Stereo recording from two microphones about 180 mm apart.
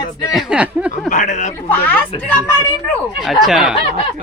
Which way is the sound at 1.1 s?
40° left (ahead or behind).